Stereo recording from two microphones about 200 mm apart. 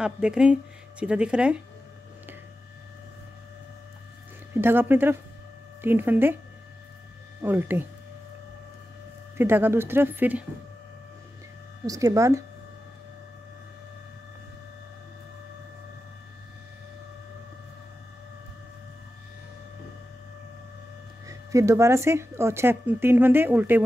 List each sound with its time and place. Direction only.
0.0 s speech: 5° right (ahead or behind)
4.6 s speech: 10° right (ahead or behind)
7.4 s speech: 10° right (ahead or behind)
9.4 s speech: 10° right (ahead or behind)
11.8 s speech: 15° right (ahead or behind)
21.3 s speech: 15° right (ahead or behind)